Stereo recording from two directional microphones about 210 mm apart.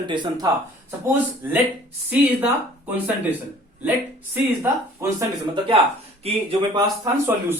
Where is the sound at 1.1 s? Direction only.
10° right (ahead or behind).